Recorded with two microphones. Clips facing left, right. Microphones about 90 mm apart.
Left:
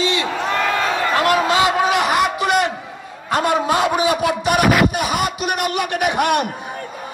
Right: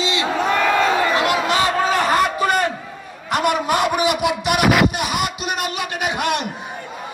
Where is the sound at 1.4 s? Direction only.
25° left (ahead or behind).